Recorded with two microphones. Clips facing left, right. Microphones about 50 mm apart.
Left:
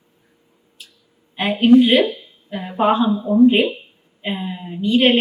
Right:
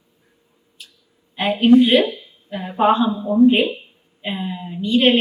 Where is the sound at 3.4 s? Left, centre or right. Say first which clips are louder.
Even; left.